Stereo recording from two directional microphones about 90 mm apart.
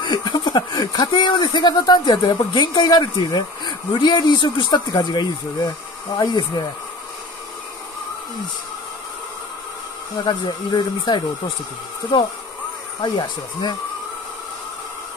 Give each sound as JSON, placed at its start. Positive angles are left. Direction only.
{"t": 0.0, "sound": "speech", "side_deg": 50}
{"t": 10.2, "sound": "speech", "side_deg": 55}
{"t": 13.0, "sound": "speech", "side_deg": 50}